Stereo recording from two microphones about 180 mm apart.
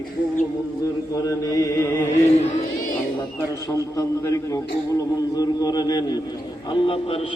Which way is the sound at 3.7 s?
15° left (ahead or behind).